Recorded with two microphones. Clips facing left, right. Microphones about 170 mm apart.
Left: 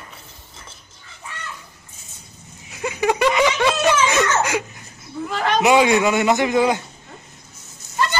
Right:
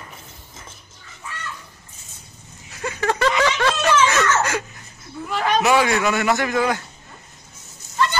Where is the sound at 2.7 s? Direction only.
15° left (ahead or behind).